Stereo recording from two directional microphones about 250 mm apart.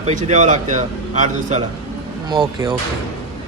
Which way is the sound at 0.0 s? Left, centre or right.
Right.